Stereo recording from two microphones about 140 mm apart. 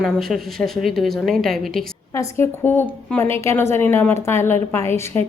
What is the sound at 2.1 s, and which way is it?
Speech, 20° left (ahead or behind).